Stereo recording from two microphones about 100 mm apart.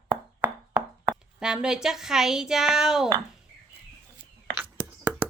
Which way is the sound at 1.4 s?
5° right (ahead or behind).